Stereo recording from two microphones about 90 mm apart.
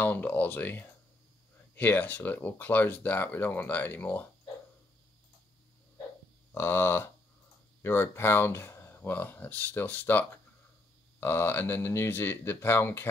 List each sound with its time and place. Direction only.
0.0 s speech: 20° left (ahead or behind)
6.5 s speech: 25° left (ahead or behind)